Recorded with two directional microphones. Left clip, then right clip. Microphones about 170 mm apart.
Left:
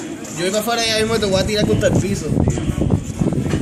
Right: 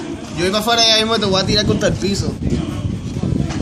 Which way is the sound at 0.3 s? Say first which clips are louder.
Right 4 dB; 35° right (ahead or behind).